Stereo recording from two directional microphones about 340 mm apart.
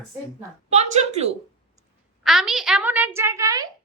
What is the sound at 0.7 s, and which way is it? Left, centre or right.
Speech, centre.